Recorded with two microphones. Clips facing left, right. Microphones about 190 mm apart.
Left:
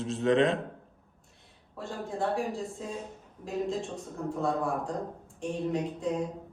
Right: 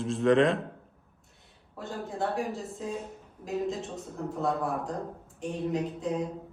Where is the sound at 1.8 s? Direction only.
Centre (ahead or behind).